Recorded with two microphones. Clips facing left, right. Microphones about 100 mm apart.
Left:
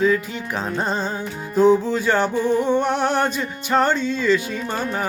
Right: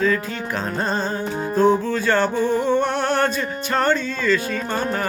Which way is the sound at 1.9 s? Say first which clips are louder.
Even; 15° left (ahead or behind).